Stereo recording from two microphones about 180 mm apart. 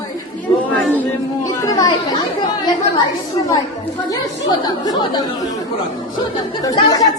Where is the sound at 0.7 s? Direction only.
10° left (ahead or behind).